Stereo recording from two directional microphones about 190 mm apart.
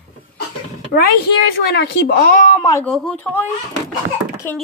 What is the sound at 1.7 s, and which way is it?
Speech, 60° left (ahead or behind).